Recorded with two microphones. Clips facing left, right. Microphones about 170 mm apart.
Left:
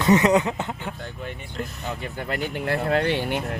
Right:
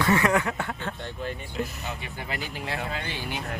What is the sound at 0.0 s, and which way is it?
Speech, 20° left (ahead or behind).